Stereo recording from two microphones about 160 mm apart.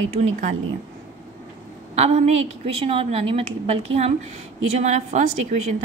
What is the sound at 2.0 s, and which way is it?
A woman's voice, 45° right (ahead or behind).